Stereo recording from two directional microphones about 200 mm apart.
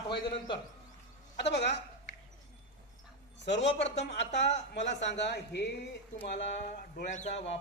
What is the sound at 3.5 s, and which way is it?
Speech, 60° left (ahead or behind).